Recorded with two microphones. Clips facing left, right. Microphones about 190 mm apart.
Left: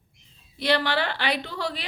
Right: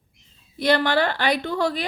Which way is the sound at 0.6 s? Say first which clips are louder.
Right 4 dB; 45° right (ahead or behind).